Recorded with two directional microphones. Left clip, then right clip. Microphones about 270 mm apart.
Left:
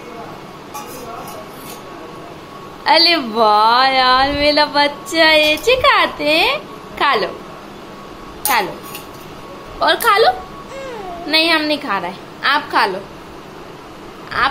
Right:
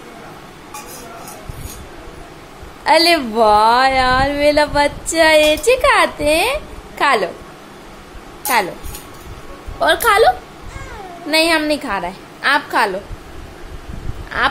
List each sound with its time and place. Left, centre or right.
2.8 s a woman's voice: centre
9.8 s a woman's voice: centre
14.3 s a woman's voice: centre